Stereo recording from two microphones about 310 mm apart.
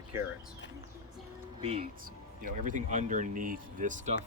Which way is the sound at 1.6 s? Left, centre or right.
Centre.